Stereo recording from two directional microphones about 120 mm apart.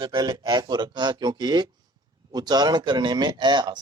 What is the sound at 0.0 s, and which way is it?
A man's voice, 35° right (ahead or behind).